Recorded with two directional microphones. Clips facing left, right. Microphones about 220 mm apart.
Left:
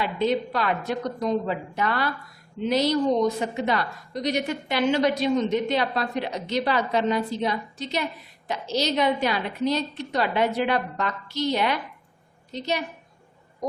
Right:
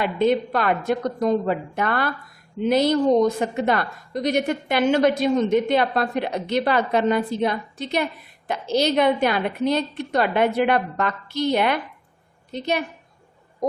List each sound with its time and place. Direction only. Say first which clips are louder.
0.0 s a woman's voice: right 4 dB; 55° right (ahead or behind)